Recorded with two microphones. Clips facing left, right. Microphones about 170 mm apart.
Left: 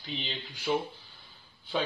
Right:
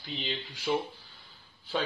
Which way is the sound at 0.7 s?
Centre (ahead or behind).